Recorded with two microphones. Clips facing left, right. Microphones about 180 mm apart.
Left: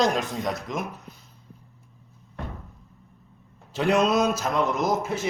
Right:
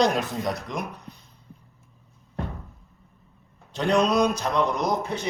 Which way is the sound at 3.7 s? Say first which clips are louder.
Even; 5° left (ahead or behind).